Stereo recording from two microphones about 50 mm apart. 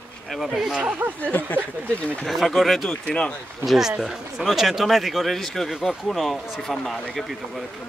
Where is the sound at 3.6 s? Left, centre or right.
Centre.